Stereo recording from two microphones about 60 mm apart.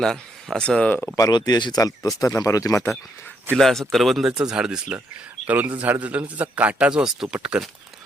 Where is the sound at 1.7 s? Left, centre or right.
Left.